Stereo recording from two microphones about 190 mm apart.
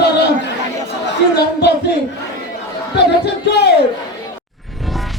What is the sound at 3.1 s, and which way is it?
Speech, 60° left (ahead or behind).